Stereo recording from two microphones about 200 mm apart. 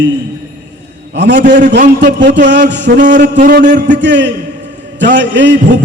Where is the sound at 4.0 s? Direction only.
60° right (ahead or behind).